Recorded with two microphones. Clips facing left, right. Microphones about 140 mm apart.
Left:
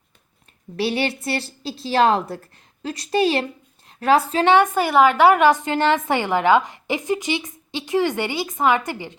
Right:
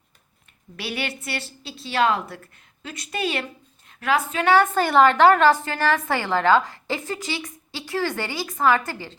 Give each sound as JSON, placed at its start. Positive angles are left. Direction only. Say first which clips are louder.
{"t": 0.8, "sound": "a woman's voice", "louder": "left 8 dB", "side_deg": 30}
{"t": 4.5, "sound": "a woman's voice", "louder": "even", "side_deg": 15}